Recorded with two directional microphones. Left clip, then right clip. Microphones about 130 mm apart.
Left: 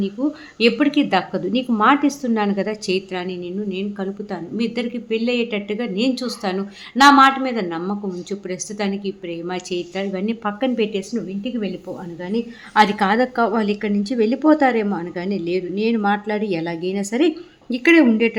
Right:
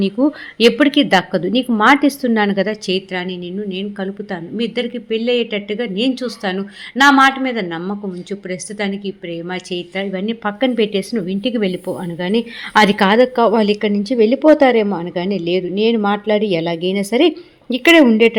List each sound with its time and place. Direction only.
0.2 s a woman's voice: 60° right (ahead or behind)
0.6 s a woman's voice: 30° right (ahead or behind); by 10.5 s 10° right (ahead or behind)
10.6 s speech: 30° right (ahead or behind)
11.3 s a woman's voice: 65° right (ahead or behind)
12.9 s a woman's voice: 25° right (ahead or behind)
17.8 s speech: 40° right (ahead or behind)